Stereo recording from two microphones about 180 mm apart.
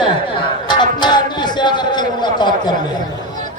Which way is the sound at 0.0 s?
25° left (ahead or behind).